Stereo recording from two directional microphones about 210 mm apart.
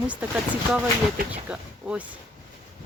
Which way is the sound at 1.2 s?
45° right (ahead or behind).